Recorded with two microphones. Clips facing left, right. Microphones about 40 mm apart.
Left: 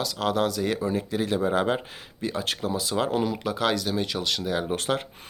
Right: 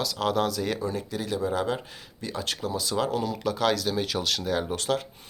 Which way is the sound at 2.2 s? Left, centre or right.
Centre.